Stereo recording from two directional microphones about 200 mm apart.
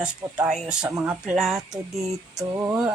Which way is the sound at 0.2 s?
15° right (ahead or behind).